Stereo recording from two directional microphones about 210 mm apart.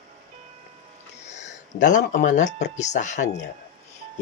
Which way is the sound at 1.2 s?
35° left (ahead or behind).